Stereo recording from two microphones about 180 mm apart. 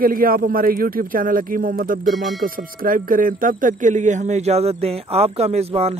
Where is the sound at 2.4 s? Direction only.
50° right (ahead or behind); by 5.9 s 35° right (ahead or behind).